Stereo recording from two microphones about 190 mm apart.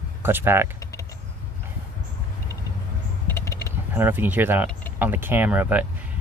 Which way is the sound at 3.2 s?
10° left (ahead or behind).